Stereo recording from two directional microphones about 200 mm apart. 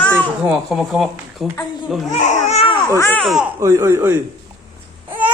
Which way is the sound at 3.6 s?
15° right (ahead or behind).